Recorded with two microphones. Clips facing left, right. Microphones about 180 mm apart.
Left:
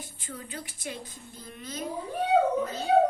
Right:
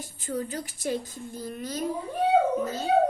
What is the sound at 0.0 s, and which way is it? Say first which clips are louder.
A woman's voice: right 10 dB; 45° right (ahead or behind).